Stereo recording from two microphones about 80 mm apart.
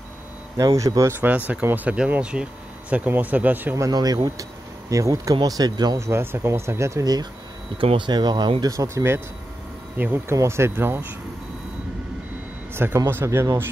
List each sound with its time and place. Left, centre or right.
0.6 s speech: right
1.5 s speech: right
1.9 s speech: centre
3.9 s speech: right
5.9 s speech: right
7.7 s speech: right
8.6 s speech: right
10.3 s speech: right
12.7 s speech: right